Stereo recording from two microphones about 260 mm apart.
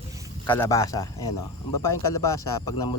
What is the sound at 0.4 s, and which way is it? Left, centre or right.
Speech, centre.